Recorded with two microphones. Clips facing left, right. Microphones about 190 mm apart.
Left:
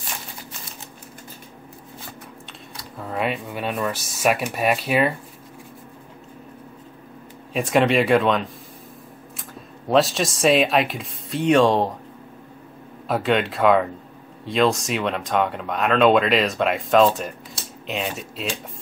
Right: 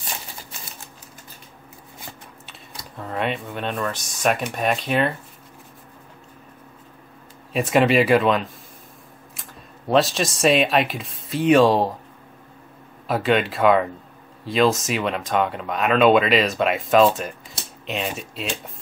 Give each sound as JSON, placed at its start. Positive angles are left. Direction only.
{"t": 3.0, "sound": "speech", "side_deg": 0}
{"t": 7.5, "sound": "speech", "side_deg": 0}
{"t": 13.1, "sound": "speech", "side_deg": 0}